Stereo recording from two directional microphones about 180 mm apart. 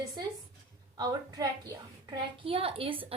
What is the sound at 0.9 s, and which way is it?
A woman's voice, 20° right (ahead or behind).